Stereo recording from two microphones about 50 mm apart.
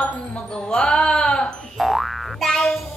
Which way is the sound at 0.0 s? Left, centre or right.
Left.